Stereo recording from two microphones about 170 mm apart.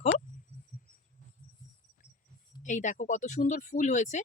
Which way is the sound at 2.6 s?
45° left (ahead or behind).